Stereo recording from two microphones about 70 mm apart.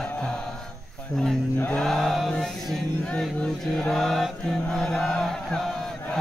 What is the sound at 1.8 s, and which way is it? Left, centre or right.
Music, centre.